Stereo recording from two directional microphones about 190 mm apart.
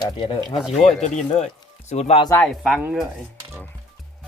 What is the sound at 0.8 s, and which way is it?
Speech, 35° left (ahead or behind).